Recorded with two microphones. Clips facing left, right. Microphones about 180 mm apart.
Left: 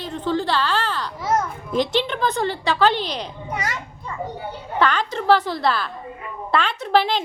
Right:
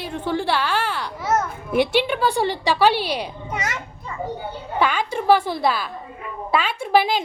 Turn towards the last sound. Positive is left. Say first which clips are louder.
# right 1 dB
turn(degrees=-10)  # may be behind; listen again after turning